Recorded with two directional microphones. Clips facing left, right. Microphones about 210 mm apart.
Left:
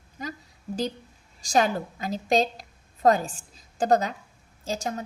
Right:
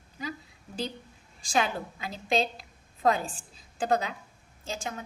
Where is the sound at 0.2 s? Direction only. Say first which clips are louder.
Left 1 dB; 45° left (ahead or behind).